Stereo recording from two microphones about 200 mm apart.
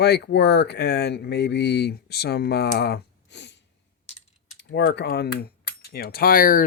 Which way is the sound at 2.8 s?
55° left (ahead or behind).